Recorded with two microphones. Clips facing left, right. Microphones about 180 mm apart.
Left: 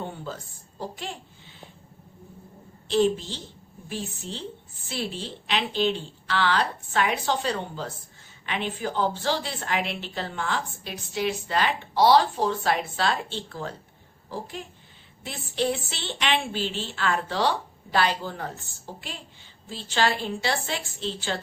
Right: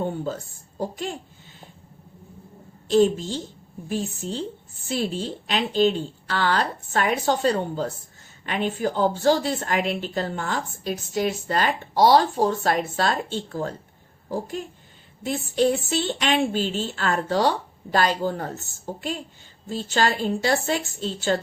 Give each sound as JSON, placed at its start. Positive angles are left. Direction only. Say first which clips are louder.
{"t": 0.0, "sound": "speech", "louder": "right 7 dB", "side_deg": -45}
{"t": 2.8, "sound": "a woman's voice", "louder": "right 4 dB", "side_deg": -45}